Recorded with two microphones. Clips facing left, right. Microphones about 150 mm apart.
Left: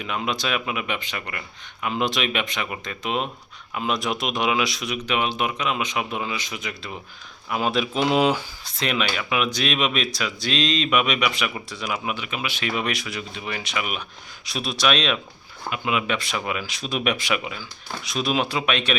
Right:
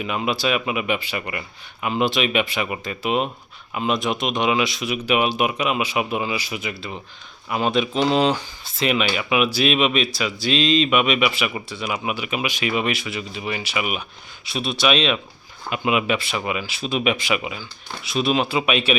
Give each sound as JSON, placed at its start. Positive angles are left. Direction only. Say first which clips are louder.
{"t": 0.0, "sound": "speech", "louder": "right 4 dB", "side_deg": -5}
{"t": 8.6, "sound": "speech", "louder": "right 4 dB", "side_deg": 0}
{"t": 15.7, "sound": "speech", "louder": "right 4 dB", "side_deg": -15}
{"t": 16.1, "sound": "speech", "louder": "right 2 dB", "side_deg": -5}